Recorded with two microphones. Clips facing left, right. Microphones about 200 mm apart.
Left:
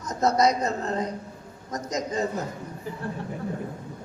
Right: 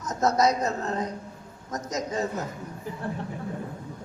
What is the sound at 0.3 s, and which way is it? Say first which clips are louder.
Speech: left 1 dB; 5° right (ahead or behind).